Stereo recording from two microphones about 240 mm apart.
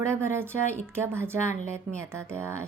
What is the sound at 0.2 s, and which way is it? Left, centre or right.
A woman's voice, centre.